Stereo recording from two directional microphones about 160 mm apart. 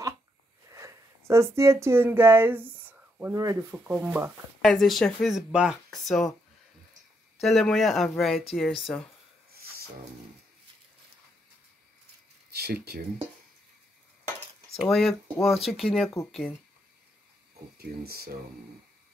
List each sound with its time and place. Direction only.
0.7 s speech: 20° right (ahead or behind)
4.6 s speech: centre (ahead or behind)
7.3 s speech: centre (ahead or behind)
12.4 s a sound: 90° right
14.8 s speech: centre (ahead or behind)
17.7 s speech: 75° right (ahead or behind)